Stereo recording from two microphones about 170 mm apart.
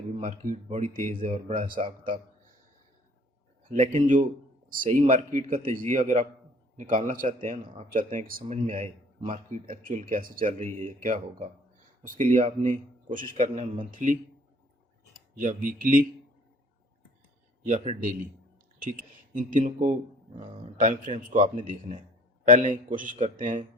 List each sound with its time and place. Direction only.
0.2 s a man's voice: 50° right (ahead or behind)
3.7 s a man's voice: 45° right (ahead or behind)
5.7 s a man's voice: 50° right (ahead or behind)
15.4 s a man's voice: 50° right (ahead or behind)
17.6 s a man's voice: 40° right (ahead or behind)